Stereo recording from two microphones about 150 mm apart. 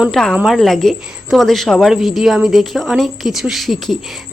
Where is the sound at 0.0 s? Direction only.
Centre (ahead or behind).